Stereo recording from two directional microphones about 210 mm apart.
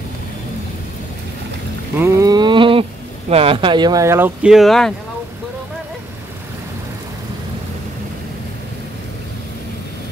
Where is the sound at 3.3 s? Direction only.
25° right (ahead or behind); by 4.9 s centre (ahead or behind).